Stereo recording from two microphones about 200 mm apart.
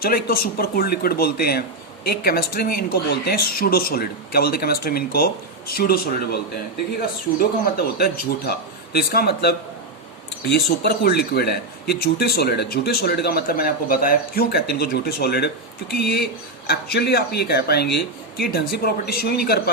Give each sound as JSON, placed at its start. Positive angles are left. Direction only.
{"t": 0.0, "sound": "speech", "side_deg": 50}
{"t": 7.3, "sound": "speech", "side_deg": 50}